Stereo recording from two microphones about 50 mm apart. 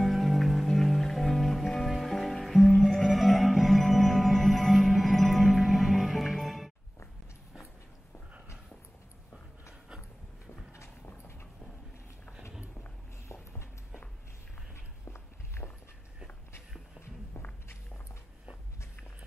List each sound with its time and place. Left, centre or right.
0.0 s music: centre
9.8 s a sound: centre
13.3 s walk: left
15.0 s walk: left
17.0 s walk: left